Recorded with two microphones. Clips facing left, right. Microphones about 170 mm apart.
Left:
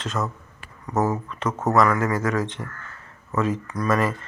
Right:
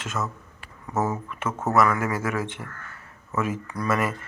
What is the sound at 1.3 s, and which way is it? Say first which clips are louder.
Speech: left 3 dB; 10° right (ahead or behind).